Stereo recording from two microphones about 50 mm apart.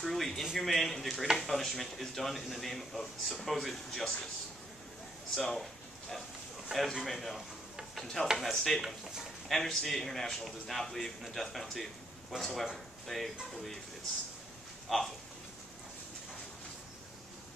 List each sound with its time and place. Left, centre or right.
0.0 s a man's voice: centre
5.5 s a sound: centre
6.7 s a man's voice: centre
7.9 s mechanisms: centre
8.4 s a man's voice: centre
8.8 s speech: centre
9.5 s a man's voice: centre
14.9 s a man's voice: centre